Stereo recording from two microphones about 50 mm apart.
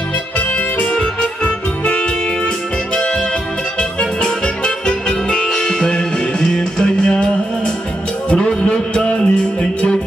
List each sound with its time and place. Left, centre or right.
0.9 s music: left
4.0 s music: centre